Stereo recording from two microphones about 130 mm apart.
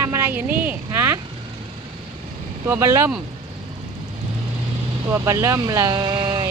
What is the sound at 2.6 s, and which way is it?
Speech, 20° right (ahead or behind).